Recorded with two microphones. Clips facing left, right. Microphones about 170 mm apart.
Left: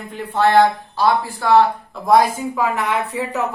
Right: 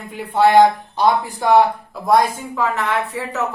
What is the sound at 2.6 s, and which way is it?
Speech, 10° left (ahead or behind).